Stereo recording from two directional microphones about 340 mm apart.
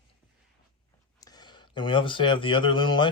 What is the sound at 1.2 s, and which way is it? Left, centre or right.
Speech, centre.